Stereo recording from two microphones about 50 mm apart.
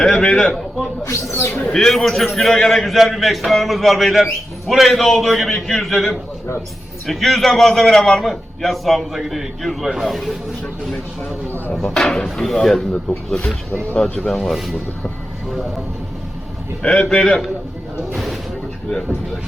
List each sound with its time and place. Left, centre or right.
0.0 s a man's voice: centre
1.0 s speech: left
1.7 s a man's voice: centre
11.7 s a man's voice: centre
12.7 s speech: centre
14.2 s a man's voice: centre
17.0 s speech: centre